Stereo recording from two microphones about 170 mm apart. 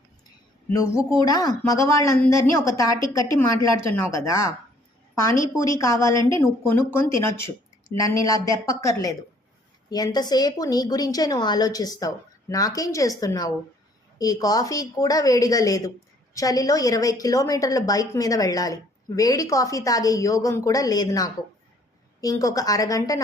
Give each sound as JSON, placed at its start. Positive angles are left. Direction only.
{"t": 0.7, "sound": "a woman's voice", "side_deg": 20}
{"t": 5.7, "sound": "a woman's voice", "side_deg": 20}